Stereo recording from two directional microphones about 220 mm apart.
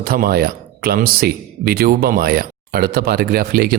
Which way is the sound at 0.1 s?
45° right (ahead or behind).